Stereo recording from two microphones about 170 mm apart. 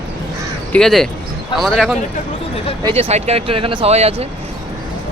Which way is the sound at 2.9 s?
35° right (ahead or behind).